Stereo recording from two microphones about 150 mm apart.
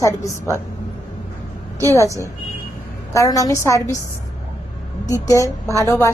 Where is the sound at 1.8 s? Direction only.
20° right (ahead or behind).